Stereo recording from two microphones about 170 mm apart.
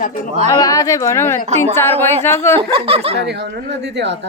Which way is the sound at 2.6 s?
35° right (ahead or behind).